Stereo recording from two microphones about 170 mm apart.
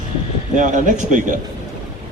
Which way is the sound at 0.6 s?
45° right (ahead or behind).